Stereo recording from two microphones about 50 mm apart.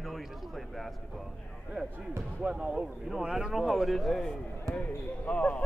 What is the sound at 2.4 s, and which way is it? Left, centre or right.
Speech, right.